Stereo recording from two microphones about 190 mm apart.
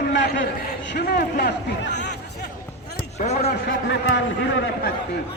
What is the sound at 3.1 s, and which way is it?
Speech, 35° left (ahead or behind).